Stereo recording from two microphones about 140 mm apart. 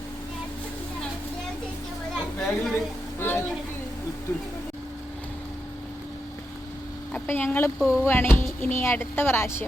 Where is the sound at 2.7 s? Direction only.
15° left (ahead or behind).